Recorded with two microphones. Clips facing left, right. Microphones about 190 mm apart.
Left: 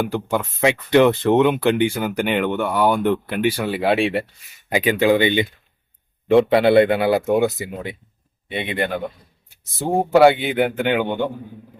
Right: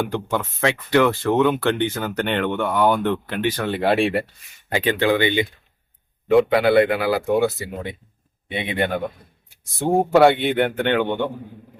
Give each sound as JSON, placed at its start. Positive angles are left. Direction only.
{"t": 0.0, "sound": "speech", "side_deg": 10}
{"t": 4.7, "sound": "speech", "side_deg": 10}
{"t": 8.5, "sound": "a man's voice", "side_deg": 0}